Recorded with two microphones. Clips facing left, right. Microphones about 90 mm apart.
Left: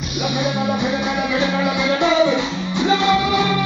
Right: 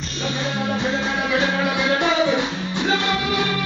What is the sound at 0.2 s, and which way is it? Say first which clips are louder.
Music: left 4 dB; 15° left (ahead or behind).